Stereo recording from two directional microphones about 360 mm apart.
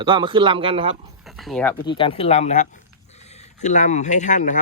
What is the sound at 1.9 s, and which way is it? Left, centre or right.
Speech, centre.